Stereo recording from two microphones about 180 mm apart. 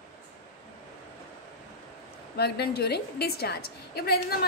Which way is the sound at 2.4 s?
65° left (ahead or behind).